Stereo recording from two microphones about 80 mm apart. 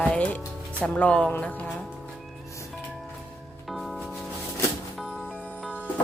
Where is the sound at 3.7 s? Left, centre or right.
Centre.